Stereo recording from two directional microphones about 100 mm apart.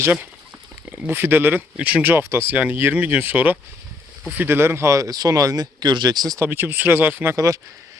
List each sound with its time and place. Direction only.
0.0 s speech: 20° right (ahead or behind); by 6.4 s 40° right (ahead or behind)
6.4 s speech: 20° right (ahead or behind)
7.3 s speech: 35° right (ahead or behind)